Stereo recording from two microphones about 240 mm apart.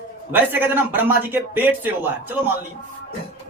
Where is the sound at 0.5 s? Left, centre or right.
Centre.